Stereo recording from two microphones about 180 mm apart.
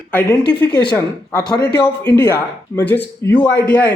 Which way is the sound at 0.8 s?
25° left (ahead or behind).